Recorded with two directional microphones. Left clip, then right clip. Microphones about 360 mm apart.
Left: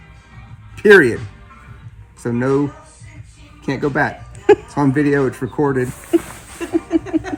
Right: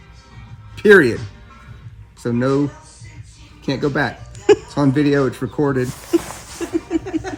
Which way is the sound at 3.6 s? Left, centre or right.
Centre.